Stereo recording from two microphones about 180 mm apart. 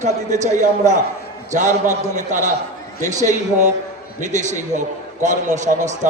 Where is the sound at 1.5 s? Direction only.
40° right (ahead or behind).